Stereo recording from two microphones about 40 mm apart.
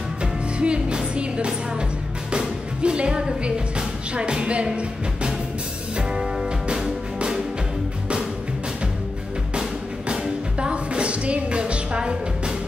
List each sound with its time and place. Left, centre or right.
0.2 s music: right
6.7 s music: centre
9.6 s music: right